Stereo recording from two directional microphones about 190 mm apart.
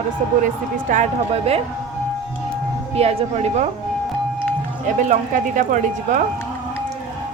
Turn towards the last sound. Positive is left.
turn(degrees=-40)  # may be behind; listen again after turning